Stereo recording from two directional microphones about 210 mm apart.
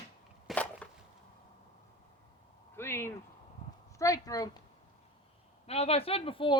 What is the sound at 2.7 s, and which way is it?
Speech, 10° left (ahead or behind).